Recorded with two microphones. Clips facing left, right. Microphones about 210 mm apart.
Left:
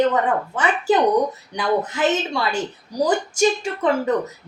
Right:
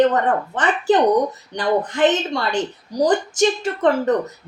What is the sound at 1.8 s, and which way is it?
A woman's voice, 5° left (ahead or behind).